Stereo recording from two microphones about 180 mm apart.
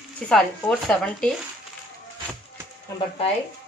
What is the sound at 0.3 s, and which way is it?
Speech, 5° left (ahead or behind).